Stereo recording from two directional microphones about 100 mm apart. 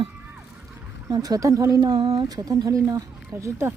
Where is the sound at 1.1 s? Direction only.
40° right (ahead or behind).